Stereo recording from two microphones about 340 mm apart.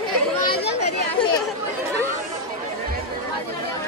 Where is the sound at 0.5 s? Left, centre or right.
Left.